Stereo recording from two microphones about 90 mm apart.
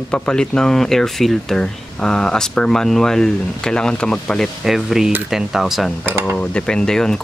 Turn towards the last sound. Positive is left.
turn(degrees=5)  # may be behind; listen again after turning